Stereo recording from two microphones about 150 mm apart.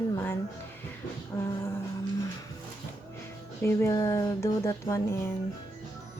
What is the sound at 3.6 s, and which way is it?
Speech, 20° left (ahead or behind).